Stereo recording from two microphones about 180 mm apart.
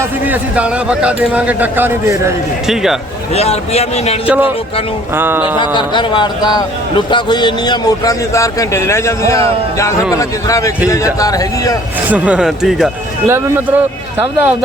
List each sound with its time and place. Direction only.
0.0 s speech: 10° right (ahead or behind)
2.6 s speech: centre (ahead or behind)
3.3 s a man's voice: 35° left (ahead or behind)
4.3 s speech: 10° right (ahead or behind)
5.5 s a man's voice: 25° left (ahead or behind)
12.0 s speech: 10° right (ahead or behind)
13.2 s speech: 15° right (ahead or behind)